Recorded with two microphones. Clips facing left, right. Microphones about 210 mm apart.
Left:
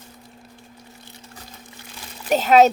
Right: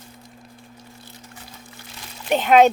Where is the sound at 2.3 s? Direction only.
40° left (ahead or behind).